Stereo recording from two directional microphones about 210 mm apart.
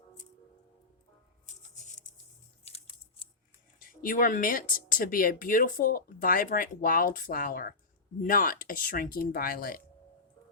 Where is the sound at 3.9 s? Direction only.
40° left (ahead or behind).